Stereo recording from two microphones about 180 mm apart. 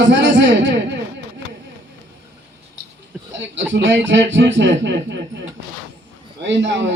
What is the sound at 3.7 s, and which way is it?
A man's voice, 90° right.